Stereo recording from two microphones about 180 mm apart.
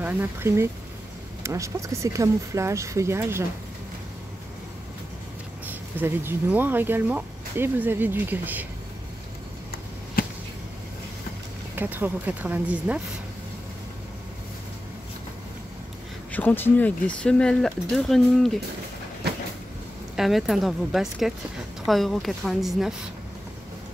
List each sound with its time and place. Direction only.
0.0 s speech: 10° right (ahead or behind)
5.7 s speech: 10° right (ahead or behind)
10.2 s a sound: 55° left (ahead or behind)
11.7 s speech: 10° right (ahead or behind)
16.3 s speech: 10° left (ahead or behind)
20.2 s speech: centre (ahead or behind)